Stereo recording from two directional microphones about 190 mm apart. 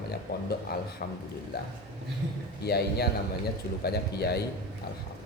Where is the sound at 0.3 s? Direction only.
55° left (ahead or behind).